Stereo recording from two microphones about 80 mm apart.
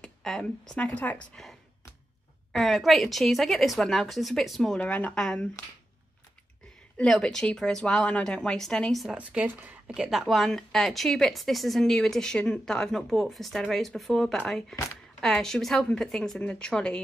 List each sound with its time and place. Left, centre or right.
0.0 s a woman's voice: centre
2.5 s speech: centre
4.7 s a woman's voice: centre
7.1 s a woman's voice: centre
9.1 s speech: centre
9.9 s a woman's voice: centre